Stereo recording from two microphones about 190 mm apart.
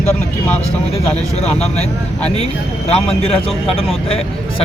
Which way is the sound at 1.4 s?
35° left (ahead or behind).